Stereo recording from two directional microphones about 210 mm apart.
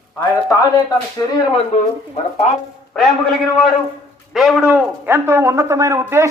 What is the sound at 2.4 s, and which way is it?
Speech, 35° left (ahead or behind).